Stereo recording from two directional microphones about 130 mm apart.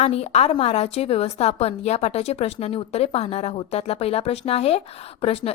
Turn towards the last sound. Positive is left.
turn(degrees=45)  # may be behind; listen again after turning